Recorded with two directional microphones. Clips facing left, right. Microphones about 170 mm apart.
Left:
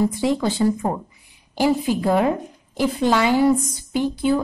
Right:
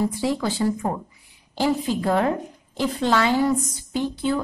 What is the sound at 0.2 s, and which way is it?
A woman's voice, 20° left (ahead or behind).